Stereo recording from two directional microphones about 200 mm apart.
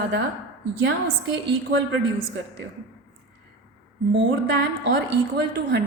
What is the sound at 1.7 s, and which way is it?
Speech, 70° right (ahead or behind).